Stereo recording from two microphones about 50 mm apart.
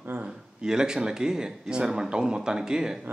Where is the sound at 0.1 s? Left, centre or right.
Right.